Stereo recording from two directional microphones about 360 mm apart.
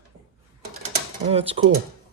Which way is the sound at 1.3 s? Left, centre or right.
Centre.